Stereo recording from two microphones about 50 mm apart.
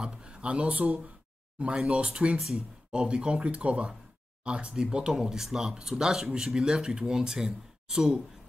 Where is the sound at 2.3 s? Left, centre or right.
Centre.